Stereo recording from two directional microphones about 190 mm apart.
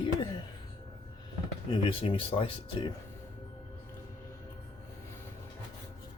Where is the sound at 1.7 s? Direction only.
30° left (ahead or behind).